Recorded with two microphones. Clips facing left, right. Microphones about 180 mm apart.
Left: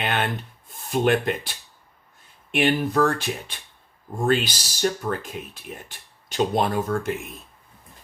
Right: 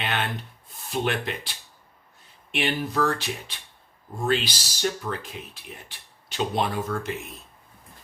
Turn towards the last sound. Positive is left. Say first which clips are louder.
# left 4 dB
turn(degrees=45)  # may be behind; listen again after turning